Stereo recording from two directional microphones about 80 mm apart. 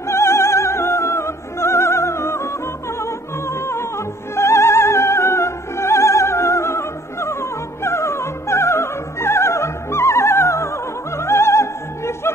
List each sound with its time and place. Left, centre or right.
0.1 s opera: left
3.0 s music: left
4.4 s opera: left